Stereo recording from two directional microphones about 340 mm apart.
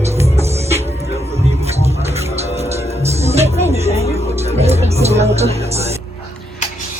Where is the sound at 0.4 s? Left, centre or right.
Centre.